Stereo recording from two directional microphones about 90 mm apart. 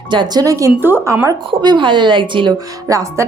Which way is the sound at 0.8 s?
25° right (ahead or behind).